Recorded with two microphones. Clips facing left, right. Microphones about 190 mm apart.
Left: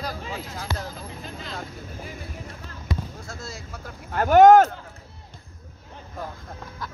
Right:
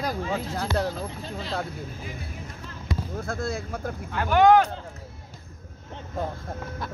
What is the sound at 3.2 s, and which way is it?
Speech, 55° right (ahead or behind).